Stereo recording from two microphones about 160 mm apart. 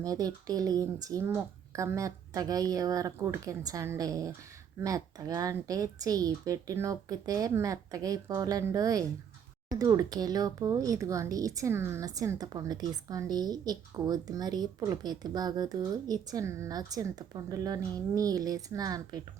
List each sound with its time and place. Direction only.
0.0 s speech: 20° right (ahead or behind)